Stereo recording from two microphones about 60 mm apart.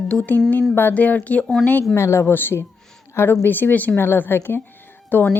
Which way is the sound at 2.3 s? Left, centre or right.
Left.